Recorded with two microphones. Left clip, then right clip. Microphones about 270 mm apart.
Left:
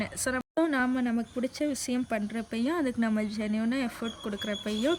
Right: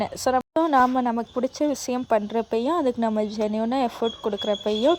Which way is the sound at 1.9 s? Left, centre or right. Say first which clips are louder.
Right 10 dB; right.